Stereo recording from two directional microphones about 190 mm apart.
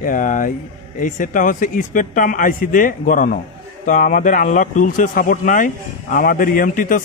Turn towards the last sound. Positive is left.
turn(degrees=45)  # may be behind; listen again after turning